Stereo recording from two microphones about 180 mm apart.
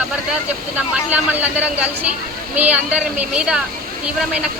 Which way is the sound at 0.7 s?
10° right (ahead or behind).